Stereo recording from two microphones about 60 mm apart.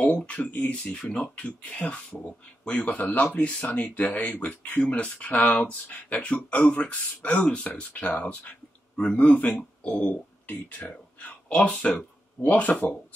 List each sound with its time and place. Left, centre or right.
0.0 s speech: left
0.9 s speech: centre
10.0 s a sound: left
11.8 s speech: left